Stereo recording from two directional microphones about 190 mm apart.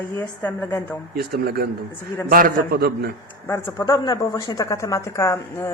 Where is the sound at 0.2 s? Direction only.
10° left (ahead or behind).